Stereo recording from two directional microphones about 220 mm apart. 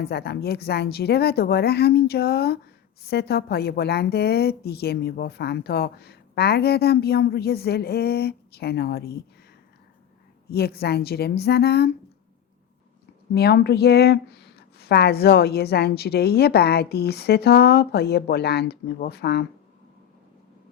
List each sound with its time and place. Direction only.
0.0 s a woman's voice: 45° left (ahead or behind)
10.5 s a woman's voice: 45° left (ahead or behind)
13.3 s a woman's voice: 50° left (ahead or behind)